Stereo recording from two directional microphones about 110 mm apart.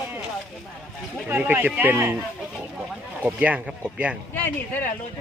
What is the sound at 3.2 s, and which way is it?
Speech, 10° right (ahead or behind).